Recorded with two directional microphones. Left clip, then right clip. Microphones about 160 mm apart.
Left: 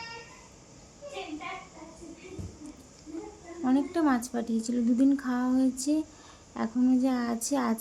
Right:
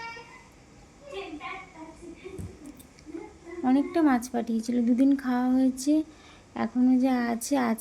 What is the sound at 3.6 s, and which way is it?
A woman's voice, 10° right (ahead or behind).